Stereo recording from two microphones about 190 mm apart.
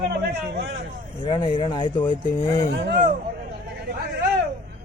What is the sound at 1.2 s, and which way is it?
Speech, 25° left (ahead or behind).